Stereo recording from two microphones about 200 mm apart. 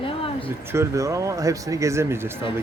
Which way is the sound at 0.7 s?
15° right (ahead or behind).